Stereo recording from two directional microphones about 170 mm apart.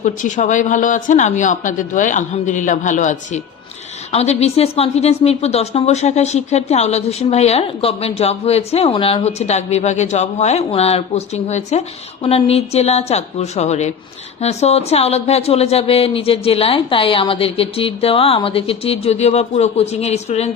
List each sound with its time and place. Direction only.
0.0 s a woman's voice: 45° left (ahead or behind)